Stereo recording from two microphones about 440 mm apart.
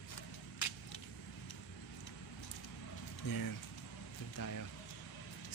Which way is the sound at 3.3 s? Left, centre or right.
Left.